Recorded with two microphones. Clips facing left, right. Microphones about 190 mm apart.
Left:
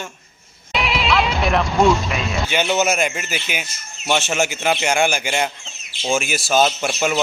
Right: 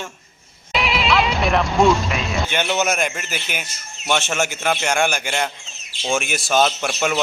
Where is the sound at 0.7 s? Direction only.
Centre (ahead or behind).